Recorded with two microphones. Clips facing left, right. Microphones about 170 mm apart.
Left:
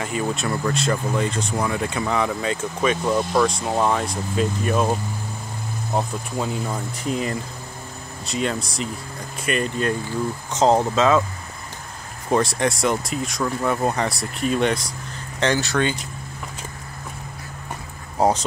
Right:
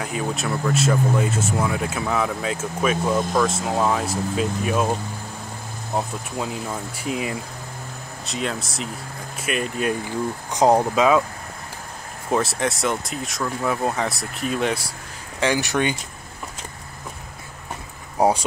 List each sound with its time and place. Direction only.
0.0 s speech: centre (ahead or behind)
5.9 s speech: centre (ahead or behind)
12.3 s speech: 5° right (ahead or behind)
15.4 s speech: 15° right (ahead or behind)
18.1 s vehicle: 10° right (ahead or behind)